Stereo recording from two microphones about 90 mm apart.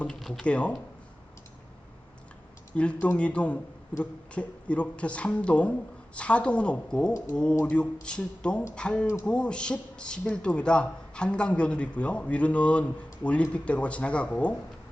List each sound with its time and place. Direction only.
0.0 s speech: 5° left (ahead or behind)
0.4 s speech: 15° left (ahead or behind)
2.7 s speech: 15° left (ahead or behind)